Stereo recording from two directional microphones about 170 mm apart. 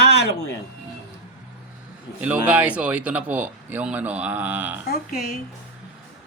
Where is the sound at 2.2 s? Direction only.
10° right (ahead or behind).